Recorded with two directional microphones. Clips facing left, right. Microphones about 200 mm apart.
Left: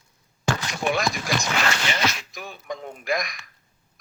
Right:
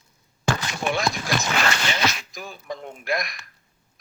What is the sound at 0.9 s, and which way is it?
Speech, centre (ahead or behind).